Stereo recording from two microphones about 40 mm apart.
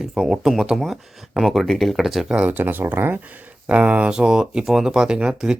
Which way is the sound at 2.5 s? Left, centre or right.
Right.